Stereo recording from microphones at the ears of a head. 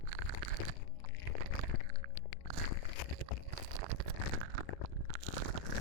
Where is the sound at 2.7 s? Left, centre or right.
Left.